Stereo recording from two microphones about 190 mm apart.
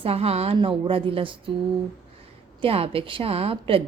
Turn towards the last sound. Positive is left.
turn(degrees=-30)  # may be behind; listen again after turning